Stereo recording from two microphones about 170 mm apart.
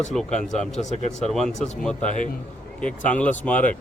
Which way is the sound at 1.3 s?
5° left (ahead or behind).